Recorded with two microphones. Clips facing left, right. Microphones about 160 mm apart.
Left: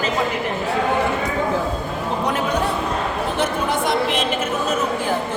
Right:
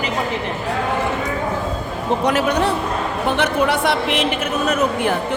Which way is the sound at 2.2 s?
75° right (ahead or behind).